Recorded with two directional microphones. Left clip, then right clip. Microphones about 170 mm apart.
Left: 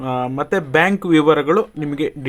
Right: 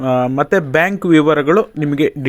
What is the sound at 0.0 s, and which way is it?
Speech, 25° right (ahead or behind).